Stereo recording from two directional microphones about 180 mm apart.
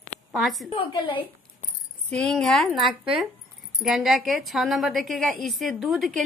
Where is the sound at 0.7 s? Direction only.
25° left (ahead or behind).